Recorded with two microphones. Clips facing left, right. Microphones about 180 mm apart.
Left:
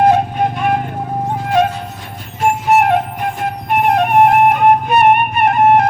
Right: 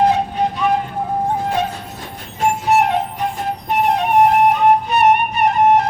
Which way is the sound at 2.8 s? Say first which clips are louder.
Left 3 dB; 55° left (ahead or behind).